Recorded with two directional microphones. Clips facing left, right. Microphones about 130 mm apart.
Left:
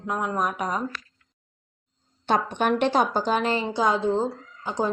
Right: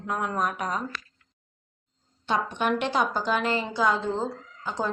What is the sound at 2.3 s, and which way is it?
A woman's voice, 45° left (ahead or behind).